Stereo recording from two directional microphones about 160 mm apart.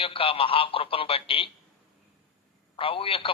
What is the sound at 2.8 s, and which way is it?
Speech, 35° left (ahead or behind).